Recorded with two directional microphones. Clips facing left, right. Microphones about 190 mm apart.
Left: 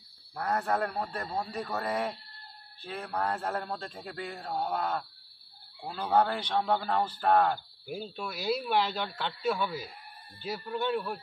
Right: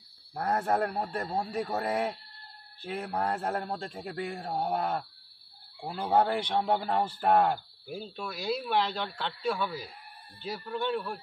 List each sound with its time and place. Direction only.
0.3 s a man's voice: 30° right (ahead or behind)
1.4 s speech: 10° right (ahead or behind)
3.1 s a man's voice: 20° right (ahead or behind)
5.8 s speech: 10° right (ahead or behind)
6.1 s speech: 25° right (ahead or behind)
7.8 s speech: 5° left (ahead or behind)